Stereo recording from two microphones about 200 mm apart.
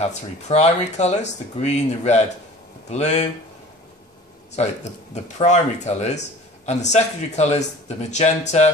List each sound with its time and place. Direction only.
0.0 s speech: 35° left (ahead or behind)
4.6 s speech: 35° left (ahead or behind)